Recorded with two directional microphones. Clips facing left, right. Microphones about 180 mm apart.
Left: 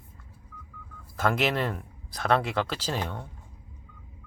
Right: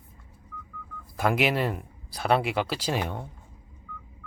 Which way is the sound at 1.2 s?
10° right (ahead or behind).